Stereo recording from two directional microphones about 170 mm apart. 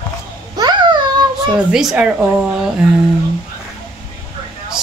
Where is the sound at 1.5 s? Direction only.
5° right (ahead or behind).